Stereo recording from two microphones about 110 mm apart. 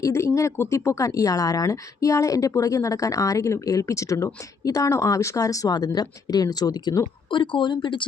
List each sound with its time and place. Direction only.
0.0 s speech: 25° left (ahead or behind)
7.3 s speech: 50° left (ahead or behind)